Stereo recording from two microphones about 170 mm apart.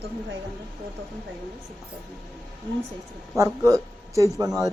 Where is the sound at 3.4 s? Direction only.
20° right (ahead or behind).